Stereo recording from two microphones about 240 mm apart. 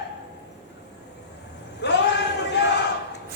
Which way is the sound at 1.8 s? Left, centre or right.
Left.